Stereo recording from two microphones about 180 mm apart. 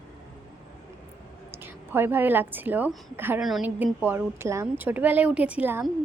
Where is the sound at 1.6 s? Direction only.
10° right (ahead or behind).